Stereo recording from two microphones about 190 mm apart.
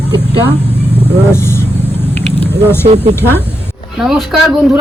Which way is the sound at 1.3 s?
15° left (ahead or behind).